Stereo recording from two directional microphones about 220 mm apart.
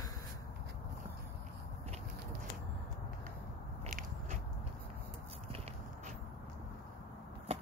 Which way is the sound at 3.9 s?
40° right (ahead or behind).